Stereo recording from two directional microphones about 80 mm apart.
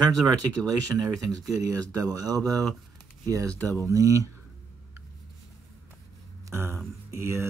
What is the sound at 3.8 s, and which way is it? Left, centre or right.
Speech, right.